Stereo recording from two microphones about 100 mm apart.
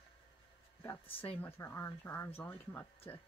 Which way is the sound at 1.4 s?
25° left (ahead or behind).